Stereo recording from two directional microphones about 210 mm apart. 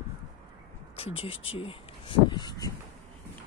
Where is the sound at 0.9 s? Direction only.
25° left (ahead or behind).